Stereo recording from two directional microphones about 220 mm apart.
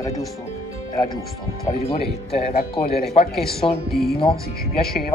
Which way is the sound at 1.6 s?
30° left (ahead or behind).